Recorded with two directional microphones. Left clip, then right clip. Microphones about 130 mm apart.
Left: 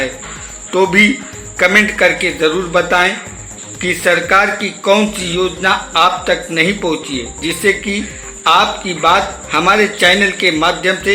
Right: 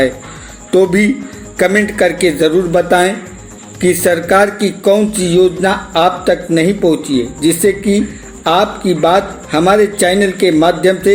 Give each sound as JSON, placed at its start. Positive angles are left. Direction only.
{"t": 0.7, "sound": "a man's voice", "side_deg": -35}